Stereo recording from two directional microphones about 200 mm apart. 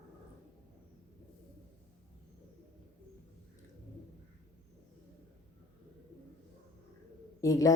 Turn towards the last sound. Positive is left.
turn(degrees=15)  # may be behind; listen again after turning